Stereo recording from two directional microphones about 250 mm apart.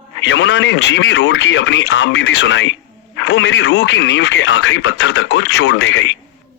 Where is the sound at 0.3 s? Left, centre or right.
Left.